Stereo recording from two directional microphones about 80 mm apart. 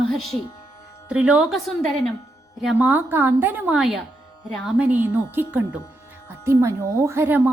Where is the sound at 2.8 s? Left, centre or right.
Right.